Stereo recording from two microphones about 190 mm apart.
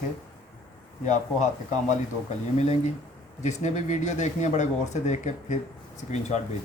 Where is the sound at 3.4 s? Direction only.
40° left (ahead or behind).